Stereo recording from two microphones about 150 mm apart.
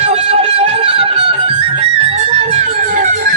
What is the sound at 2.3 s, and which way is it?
Music, 45° right (ahead or behind).